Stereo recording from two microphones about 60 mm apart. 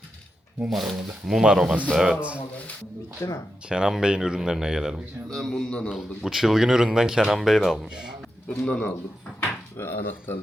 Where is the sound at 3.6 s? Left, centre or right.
Centre.